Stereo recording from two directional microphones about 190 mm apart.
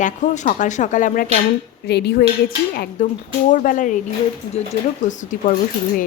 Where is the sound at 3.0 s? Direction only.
45° left (ahead or behind).